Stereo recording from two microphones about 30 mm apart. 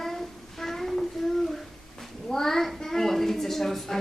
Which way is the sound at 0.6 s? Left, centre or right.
Centre.